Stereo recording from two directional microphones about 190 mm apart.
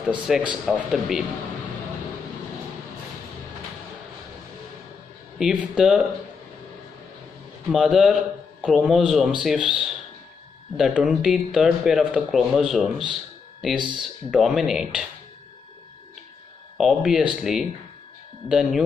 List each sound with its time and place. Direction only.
0.3 s speech: centre (ahead or behind)
5.4 s speech: 5° right (ahead or behind)
7.7 s speech: 5° right (ahead or behind)
13.7 s speech: 25° right (ahead or behind)
14.0 s speech: centre (ahead or behind)
16.7 s speech: centre (ahead or behind)